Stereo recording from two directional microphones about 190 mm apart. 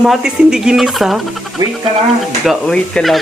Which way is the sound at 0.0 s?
5° right (ahead or behind).